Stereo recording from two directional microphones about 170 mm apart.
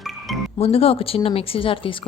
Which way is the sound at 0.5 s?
35° left (ahead or behind).